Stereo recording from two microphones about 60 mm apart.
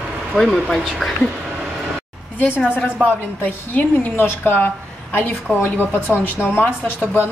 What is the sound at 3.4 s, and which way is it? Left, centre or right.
A woman's voice, left.